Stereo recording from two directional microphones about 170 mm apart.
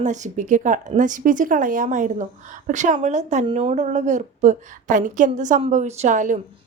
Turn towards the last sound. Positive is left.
turn(degrees=-45)  # may be behind; listen again after turning